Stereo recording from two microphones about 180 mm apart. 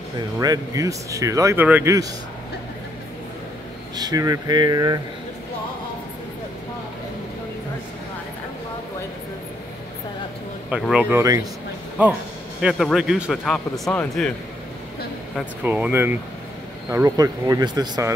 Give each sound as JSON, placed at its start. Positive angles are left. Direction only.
{"t": 0.4, "sound": "speech", "side_deg": -20}
{"t": 3.9, "sound": "speech", "side_deg": -20}
{"t": 10.7, "sound": "speech", "side_deg": -5}
{"t": 12.6, "sound": "speech", "side_deg": 0}
{"t": 15.6, "sound": "speech", "side_deg": -10}